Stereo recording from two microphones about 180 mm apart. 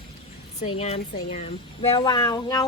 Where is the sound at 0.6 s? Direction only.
35° left (ahead or behind).